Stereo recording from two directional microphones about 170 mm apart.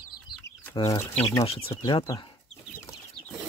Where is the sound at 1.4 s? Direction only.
35° left (ahead or behind).